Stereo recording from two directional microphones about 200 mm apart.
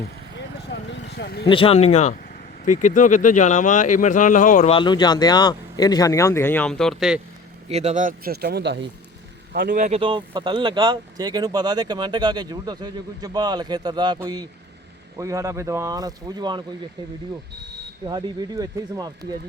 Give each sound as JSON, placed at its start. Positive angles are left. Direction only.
{"t": 0.7, "sound": "vehicle", "side_deg": 60}
{"t": 1.5, "sound": "speech", "side_deg": 25}
{"t": 4.8, "sound": "speech", "side_deg": 20}
{"t": 7.7, "sound": "speech", "side_deg": -35}
{"t": 9.5, "sound": "a man's voice", "side_deg": -45}
{"t": 10.0, "sound": "speech", "side_deg": -25}
{"t": 18.0, "sound": "speech", "side_deg": -20}